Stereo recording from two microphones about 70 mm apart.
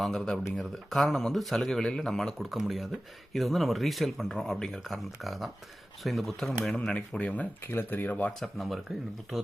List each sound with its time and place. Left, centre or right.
0.0 s speech: centre
7.7 s speech: left
8.4 s speech: centre